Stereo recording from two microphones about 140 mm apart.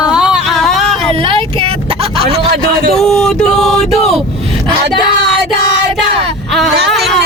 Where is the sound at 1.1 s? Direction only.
40° right (ahead or behind).